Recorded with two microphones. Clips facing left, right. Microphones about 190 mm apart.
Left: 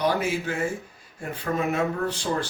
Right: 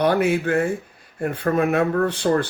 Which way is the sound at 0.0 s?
60° right (ahead or behind).